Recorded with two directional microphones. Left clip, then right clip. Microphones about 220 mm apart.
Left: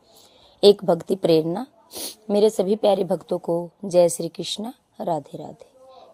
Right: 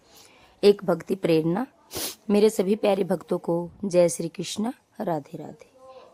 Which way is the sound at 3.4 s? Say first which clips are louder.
Left 2 dB; 10° right (ahead or behind).